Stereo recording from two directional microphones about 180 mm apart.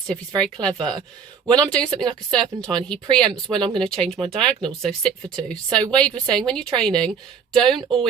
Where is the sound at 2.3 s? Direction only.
5° left (ahead or behind).